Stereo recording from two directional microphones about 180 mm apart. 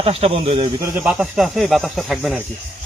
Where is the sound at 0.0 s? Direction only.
35° right (ahead or behind).